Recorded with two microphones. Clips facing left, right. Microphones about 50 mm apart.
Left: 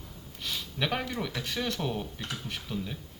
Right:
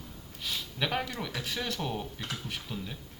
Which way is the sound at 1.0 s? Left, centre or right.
Centre.